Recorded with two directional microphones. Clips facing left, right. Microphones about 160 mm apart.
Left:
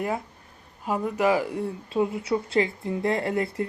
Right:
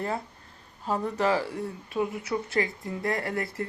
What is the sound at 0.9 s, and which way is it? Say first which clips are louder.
A woman's voice: left 3 dB; 10° left (ahead or behind).